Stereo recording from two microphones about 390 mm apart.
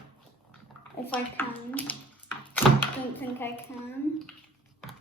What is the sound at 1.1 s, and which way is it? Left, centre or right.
Speech, centre.